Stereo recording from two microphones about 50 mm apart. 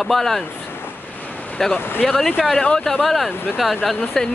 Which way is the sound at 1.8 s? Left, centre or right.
Left.